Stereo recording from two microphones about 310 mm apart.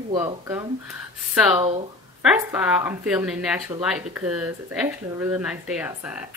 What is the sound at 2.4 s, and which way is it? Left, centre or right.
Speech, centre.